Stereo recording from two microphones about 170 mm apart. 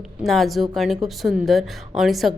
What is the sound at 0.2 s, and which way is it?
Speech, centre (ahead or behind).